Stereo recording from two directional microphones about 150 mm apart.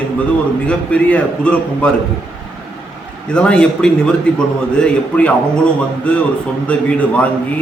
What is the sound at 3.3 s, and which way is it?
A man's voice, 5° left (ahead or behind).